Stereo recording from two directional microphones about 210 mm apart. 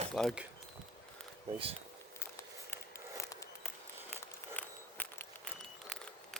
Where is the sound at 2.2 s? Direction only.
10° left (ahead or behind).